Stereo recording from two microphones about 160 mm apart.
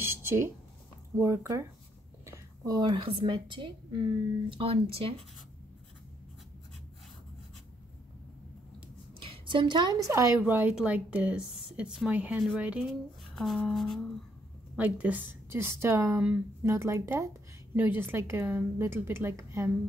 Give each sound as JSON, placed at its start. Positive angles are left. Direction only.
{"t": 0.0, "sound": "a sound", "side_deg": -15}
{"t": 1.1, "sound": "a woman's voice", "side_deg": -15}
{"t": 9.2, "sound": "a woman's voice", "side_deg": -35}
{"t": 12.8, "sound": "speech", "side_deg": 0}
{"t": 14.8, "sound": "a woman's voice", "side_deg": -10}